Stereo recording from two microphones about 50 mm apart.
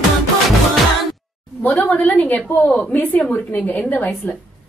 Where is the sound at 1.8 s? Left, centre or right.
Left.